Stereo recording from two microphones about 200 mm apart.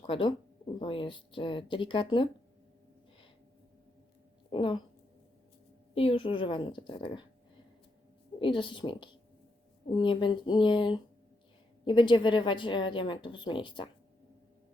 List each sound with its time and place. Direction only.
0.0 s a woman's voice: 25° left (ahead or behind)
4.5 s a woman's voice: 25° left (ahead or behind)
5.9 s a woman's voice: 30° left (ahead or behind)
8.4 s a woman's voice: 25° left (ahead or behind)